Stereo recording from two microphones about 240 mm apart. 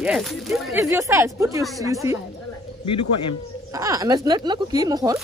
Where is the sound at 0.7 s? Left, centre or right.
Centre.